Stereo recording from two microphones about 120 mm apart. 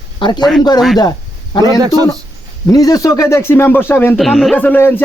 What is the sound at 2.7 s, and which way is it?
A man's voice, 30° left (ahead or behind).